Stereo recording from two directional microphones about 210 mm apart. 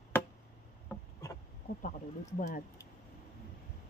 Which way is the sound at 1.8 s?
35° left (ahead or behind).